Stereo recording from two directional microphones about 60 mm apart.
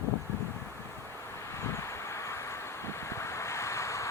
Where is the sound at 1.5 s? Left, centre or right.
Left.